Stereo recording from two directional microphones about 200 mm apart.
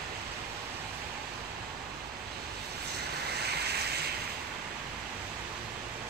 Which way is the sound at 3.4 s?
55° right (ahead or behind).